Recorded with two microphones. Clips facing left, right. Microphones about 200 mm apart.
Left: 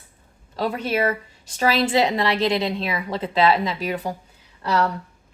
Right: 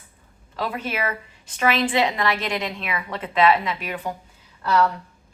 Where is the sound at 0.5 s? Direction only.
35° left (ahead or behind).